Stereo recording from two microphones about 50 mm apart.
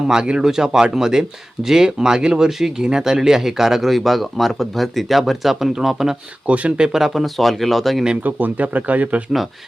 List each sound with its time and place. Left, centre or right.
0.1 s speech: centre
6.5 s speech: right; by 8.0 s centre
8.2 s speech: right